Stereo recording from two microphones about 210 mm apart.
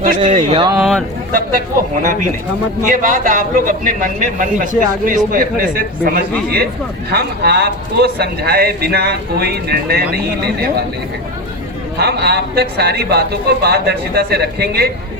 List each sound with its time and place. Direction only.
0.3 s speech: 30° right (ahead or behind)
0.8 s a sound: centre (ahead or behind)
1.3 s a man's voice: 40° right (ahead or behind)
11.9 s a man's voice: 50° right (ahead or behind)